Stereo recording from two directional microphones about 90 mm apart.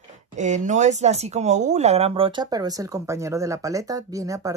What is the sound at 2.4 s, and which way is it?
Speech, 45° right (ahead or behind).